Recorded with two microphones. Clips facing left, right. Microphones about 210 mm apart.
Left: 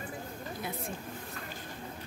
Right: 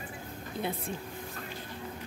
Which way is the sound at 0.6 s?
30° right (ahead or behind).